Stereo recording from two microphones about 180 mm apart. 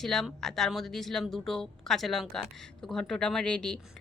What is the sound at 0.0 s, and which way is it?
Speech, centre (ahead or behind).